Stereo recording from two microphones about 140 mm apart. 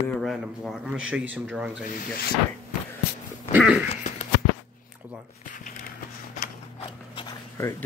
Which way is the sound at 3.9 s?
60° left (ahead or behind).